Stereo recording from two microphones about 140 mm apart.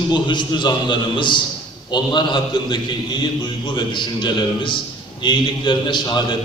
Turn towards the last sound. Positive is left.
turn(degrees=35)  # may be behind; listen again after turning